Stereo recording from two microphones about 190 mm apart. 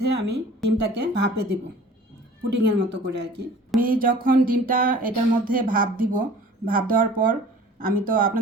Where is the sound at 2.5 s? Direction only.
60° right (ahead or behind).